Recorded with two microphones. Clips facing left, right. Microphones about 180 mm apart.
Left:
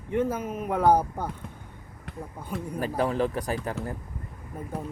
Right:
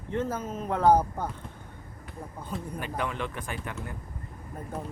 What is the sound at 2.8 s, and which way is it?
Speech, 35° left (ahead or behind).